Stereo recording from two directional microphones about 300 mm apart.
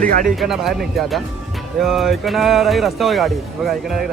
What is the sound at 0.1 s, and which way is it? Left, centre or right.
Speech, right.